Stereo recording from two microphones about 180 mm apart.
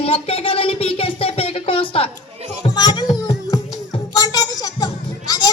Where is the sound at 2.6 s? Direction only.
25° left (ahead or behind).